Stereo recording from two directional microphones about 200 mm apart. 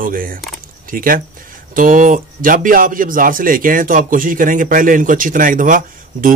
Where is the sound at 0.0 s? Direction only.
45° right (ahead or behind).